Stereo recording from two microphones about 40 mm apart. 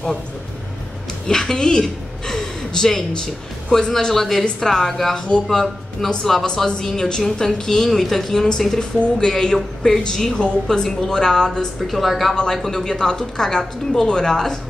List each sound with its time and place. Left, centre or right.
1.2 s a woman's voice: centre
3.1 s speech: left
4.1 s a woman's voice: centre
11.8 s a woman's voice: centre
12.6 s a woman's voice: centre